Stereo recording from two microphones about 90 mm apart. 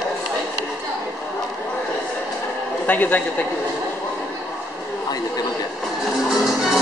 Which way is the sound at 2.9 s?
20° left (ahead or behind).